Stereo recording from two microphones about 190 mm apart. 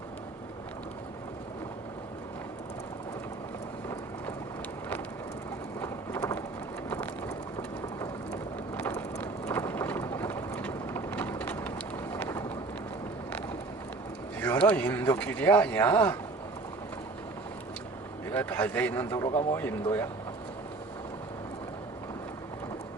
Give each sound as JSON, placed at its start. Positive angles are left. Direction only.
{"t": 5.8, "sound": "rain", "side_deg": 15}
{"t": 6.9, "sound": "a sound", "side_deg": 10}
{"t": 8.3, "sound": "vehicle", "side_deg": 10}
{"t": 12.1, "sound": "a sound", "side_deg": 15}
{"t": 14.4, "sound": "speech", "side_deg": 10}
{"t": 18.3, "sound": "a man's voice", "side_deg": 10}